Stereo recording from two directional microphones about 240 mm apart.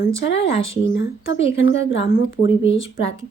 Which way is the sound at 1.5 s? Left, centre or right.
Left.